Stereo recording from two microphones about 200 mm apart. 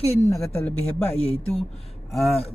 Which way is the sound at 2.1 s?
Centre (ahead or behind).